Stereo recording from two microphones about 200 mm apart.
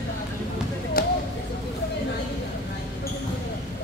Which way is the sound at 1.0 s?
45° left (ahead or behind).